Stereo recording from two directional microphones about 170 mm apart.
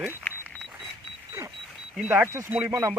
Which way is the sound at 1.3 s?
20° right (ahead or behind).